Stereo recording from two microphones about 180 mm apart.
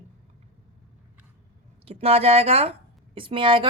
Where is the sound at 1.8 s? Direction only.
35° right (ahead or behind).